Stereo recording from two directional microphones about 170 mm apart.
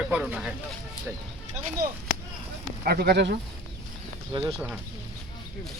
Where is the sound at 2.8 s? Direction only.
70° right (ahead or behind).